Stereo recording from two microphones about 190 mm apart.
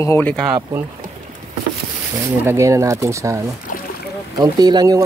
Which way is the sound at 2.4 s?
15° right (ahead or behind).